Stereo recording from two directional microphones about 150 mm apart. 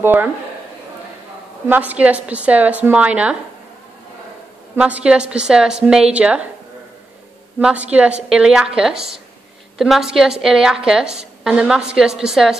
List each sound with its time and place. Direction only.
0.0 s speech: 15° right (ahead or behind)
1.7 s speech: 10° right (ahead or behind)
4.7 s a woman's voice: 10° right (ahead or behind)
7.6 s a woman's voice: 10° right (ahead or behind)